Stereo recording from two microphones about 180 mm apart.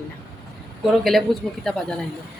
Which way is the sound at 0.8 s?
Centre (ahead or behind).